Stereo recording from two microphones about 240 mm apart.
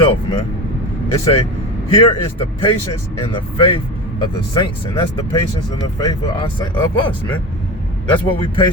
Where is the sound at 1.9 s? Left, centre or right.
Left.